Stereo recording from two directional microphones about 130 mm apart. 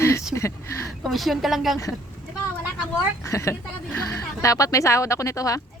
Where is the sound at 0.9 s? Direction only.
Centre (ahead or behind).